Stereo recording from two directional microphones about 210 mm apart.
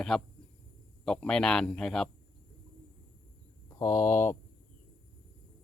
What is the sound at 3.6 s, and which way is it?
Speech, 20° left (ahead or behind).